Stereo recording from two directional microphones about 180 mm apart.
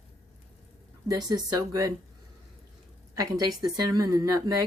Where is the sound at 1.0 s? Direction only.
20° right (ahead or behind).